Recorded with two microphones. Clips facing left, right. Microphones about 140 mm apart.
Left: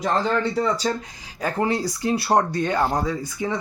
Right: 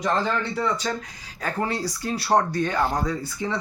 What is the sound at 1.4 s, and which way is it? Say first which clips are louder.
Speech: left 4 dB; 20° left (ahead or behind).